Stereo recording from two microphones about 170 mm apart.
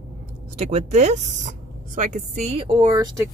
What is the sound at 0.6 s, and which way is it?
Speech, 40° right (ahead or behind).